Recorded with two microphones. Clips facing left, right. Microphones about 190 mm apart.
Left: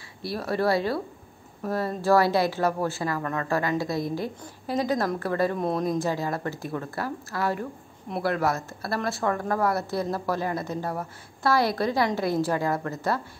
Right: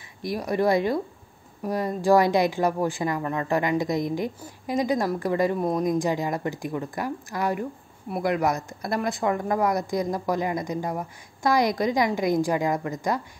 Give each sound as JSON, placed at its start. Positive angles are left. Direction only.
{"t": 0.2, "sound": "speech", "side_deg": -15}